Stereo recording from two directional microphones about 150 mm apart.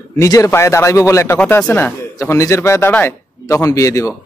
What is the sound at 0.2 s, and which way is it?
A man's voice, 20° left (ahead or behind).